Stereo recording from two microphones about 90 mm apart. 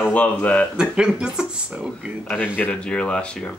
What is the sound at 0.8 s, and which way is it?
Speech, 10° right (ahead or behind).